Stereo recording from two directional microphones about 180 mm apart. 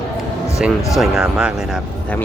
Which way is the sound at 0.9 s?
5° right (ahead or behind).